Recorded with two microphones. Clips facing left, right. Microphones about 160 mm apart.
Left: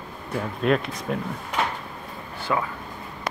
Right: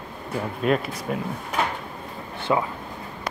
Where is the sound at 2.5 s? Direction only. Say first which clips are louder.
Right 3 dB; 20° right (ahead or behind).